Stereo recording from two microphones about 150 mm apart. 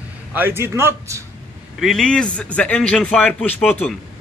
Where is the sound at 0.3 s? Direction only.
15° right (ahead or behind).